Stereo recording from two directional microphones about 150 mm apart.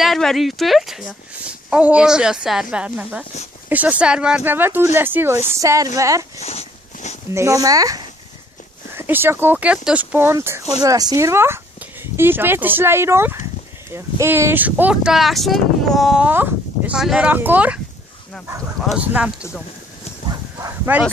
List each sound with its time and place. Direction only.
0.0 s speech: centre (ahead or behind); by 6.4 s 20° right (ahead or behind)
6.4 s dog: 45° left (ahead or behind)
7.3 s speech: 20° right (ahead or behind)
18.9 s speech: 10° right (ahead or behind)
20.5 s bow-wow: 15° right (ahead or behind)